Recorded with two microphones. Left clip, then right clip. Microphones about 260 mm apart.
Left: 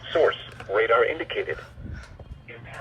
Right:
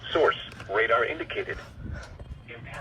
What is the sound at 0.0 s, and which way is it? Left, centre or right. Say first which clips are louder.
Radio: left 2 dB; left.